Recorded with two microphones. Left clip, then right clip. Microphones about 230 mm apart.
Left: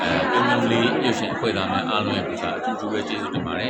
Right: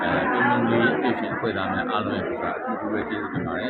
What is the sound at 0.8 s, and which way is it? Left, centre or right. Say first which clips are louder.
Speech: left 1 dB; left.